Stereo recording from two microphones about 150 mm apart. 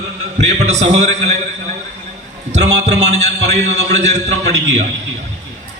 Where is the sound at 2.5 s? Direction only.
50° right (ahead or behind).